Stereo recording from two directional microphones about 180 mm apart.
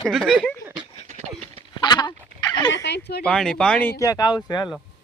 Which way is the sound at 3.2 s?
5° left (ahead or behind).